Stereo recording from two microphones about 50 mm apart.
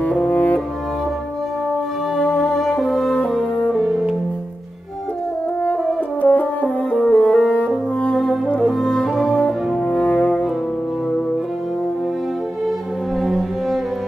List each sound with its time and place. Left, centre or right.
0.0 s music: left
2.1 s music: left
2.6 s french horn: centre
3.7 s music: centre
6.2 s french horn: left
8.5 s french horn: centre
9.3 s brass instrument: left
13.2 s music: centre